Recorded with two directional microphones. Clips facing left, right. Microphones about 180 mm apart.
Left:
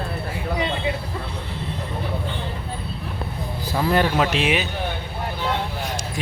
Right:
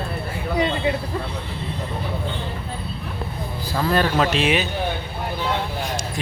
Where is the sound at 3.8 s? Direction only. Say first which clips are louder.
Even; 15° left (ahead or behind).